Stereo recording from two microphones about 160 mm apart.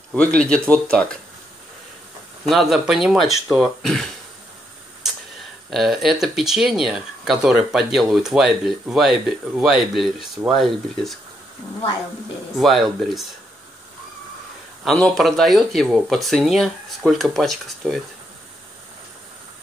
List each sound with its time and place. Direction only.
0.1 s speech: 5° left (ahead or behind)
2.4 s speech: centre (ahead or behind)
5.7 s speech: centre (ahead or behind)
12.5 s speech: centre (ahead or behind)
14.9 s speech: 5° left (ahead or behind)